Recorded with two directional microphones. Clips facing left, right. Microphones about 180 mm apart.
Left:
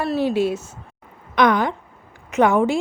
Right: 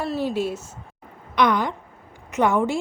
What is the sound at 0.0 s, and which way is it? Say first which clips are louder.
Speech: left 4 dB; 70° left (ahead or behind).